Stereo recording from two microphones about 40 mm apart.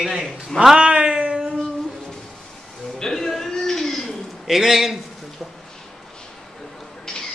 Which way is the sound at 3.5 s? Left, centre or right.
Centre.